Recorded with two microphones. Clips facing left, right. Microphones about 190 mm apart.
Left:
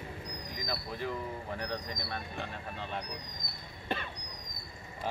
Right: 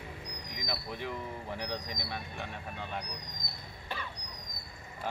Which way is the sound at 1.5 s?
15° right (ahead or behind).